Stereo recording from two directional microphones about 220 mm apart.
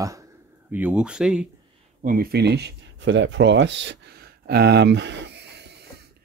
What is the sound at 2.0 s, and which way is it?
Speech, 40° right (ahead or behind).